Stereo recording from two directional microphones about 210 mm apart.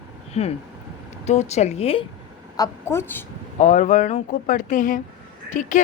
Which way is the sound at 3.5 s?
35° left (ahead or behind).